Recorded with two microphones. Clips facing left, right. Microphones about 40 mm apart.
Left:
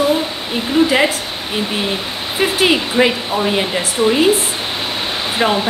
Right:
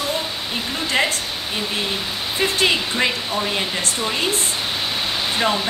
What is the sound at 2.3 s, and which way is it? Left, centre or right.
Speech, centre.